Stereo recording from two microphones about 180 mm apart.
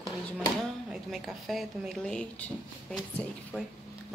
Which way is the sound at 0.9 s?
Centre (ahead or behind).